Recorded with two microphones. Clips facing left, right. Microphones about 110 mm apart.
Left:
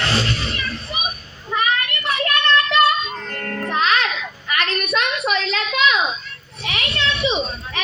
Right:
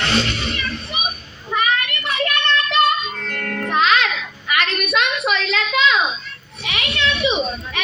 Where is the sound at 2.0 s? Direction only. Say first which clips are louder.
Even; 35° left (ahead or behind).